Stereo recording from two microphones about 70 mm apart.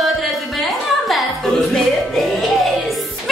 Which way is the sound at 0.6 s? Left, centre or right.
Centre.